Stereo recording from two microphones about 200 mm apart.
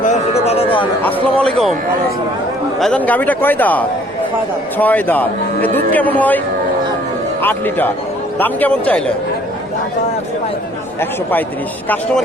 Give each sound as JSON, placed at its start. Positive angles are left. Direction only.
{"t": 0.0, "sound": "a sound", "side_deg": 35}
{"t": 1.0, "sound": "speech", "side_deg": 5}
{"t": 2.7, "sound": "speech", "side_deg": 5}
{"t": 7.4, "sound": "speech", "side_deg": 10}
{"t": 11.0, "sound": "speech", "side_deg": 10}